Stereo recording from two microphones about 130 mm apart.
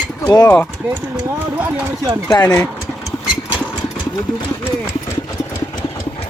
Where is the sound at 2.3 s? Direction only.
30° left (ahead or behind).